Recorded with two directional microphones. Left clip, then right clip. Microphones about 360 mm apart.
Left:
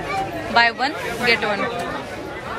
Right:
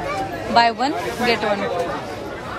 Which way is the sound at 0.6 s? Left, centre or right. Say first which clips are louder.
Right 1 dB; centre.